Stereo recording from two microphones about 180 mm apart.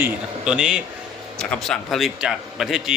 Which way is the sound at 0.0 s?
5° right (ahead or behind).